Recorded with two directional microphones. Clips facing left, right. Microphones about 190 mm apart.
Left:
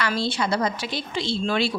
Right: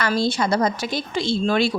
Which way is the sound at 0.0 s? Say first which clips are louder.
Right 4 dB; 45° right (ahead or behind).